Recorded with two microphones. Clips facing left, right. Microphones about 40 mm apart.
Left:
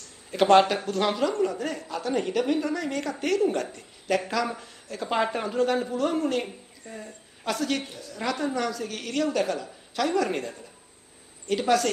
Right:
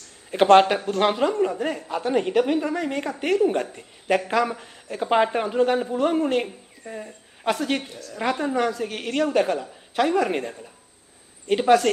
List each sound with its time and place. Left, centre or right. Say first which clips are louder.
0.3 s a woman's voice: right 4 dB; right